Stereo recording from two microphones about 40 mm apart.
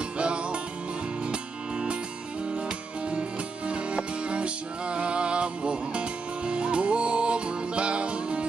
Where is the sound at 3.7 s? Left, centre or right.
Right.